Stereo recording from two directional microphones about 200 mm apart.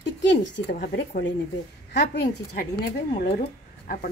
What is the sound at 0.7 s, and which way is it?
Speech, 45° left (ahead or behind).